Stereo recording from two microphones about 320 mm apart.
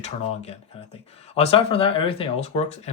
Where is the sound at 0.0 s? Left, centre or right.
Centre.